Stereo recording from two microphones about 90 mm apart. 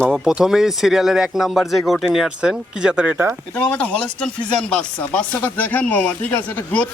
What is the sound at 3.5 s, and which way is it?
Speech, 15° left (ahead or behind).